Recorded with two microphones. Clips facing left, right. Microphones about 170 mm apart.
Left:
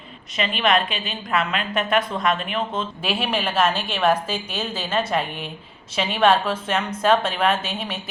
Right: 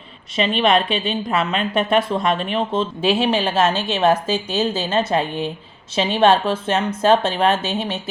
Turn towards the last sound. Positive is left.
turn(degrees=-25)  # may be behind; listen again after turning